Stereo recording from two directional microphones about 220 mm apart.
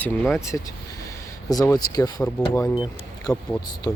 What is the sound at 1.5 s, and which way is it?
Speech, 15° left (ahead or behind).